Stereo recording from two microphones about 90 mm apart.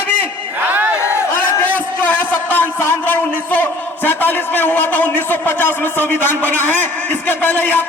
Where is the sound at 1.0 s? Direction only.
30° left (ahead or behind).